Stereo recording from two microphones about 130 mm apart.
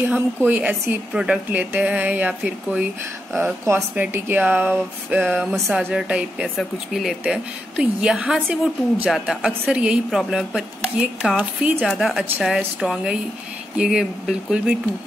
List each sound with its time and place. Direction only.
0.0 s a woman's voice: 15° right (ahead or behind)
5.5 s a woman's voice: 5° right (ahead or behind)